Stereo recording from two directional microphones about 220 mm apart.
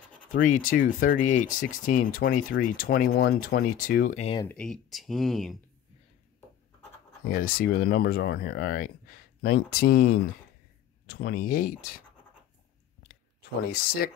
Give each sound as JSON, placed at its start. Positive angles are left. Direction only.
{"t": 0.3, "sound": "speech", "side_deg": 35}
{"t": 4.4, "sound": "speech", "side_deg": 5}
{"t": 7.2, "sound": "speech", "side_deg": 40}